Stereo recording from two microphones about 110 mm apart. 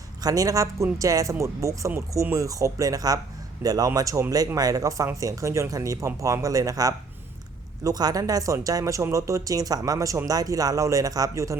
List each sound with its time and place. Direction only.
0.2 s speech: 35° right (ahead or behind)